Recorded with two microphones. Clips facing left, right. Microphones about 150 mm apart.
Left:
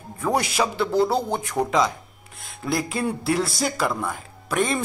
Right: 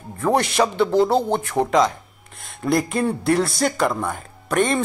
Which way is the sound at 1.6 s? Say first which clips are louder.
Right 2 dB; 20° right (ahead or behind).